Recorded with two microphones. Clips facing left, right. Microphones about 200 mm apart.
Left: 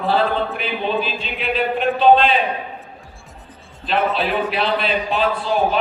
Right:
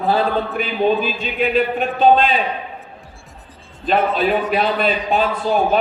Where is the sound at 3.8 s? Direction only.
45° right (ahead or behind).